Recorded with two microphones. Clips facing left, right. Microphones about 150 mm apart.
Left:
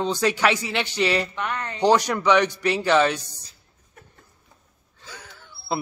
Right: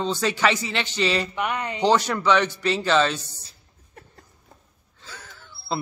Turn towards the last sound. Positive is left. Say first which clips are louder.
# left 1 dB
turn(degrees=10)  # may be behind; listen again after turning